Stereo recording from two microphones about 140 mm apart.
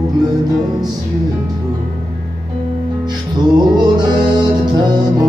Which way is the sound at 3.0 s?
30° right (ahead or behind).